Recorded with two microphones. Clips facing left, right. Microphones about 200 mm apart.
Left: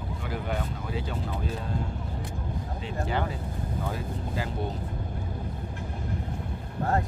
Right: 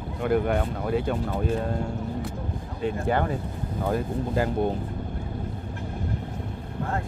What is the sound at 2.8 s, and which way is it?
Speech, 50° right (ahead or behind).